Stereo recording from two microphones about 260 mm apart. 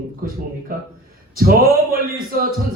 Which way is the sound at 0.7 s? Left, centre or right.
Right.